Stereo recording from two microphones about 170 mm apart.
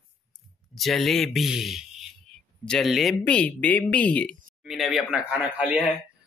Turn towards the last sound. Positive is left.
turn(degrees=-5)  # may be behind; listen again after turning